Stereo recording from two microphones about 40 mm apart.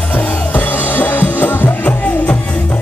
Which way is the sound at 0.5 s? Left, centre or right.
Left.